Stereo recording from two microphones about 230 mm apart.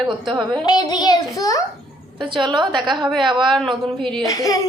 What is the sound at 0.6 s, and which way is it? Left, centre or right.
Speech, centre.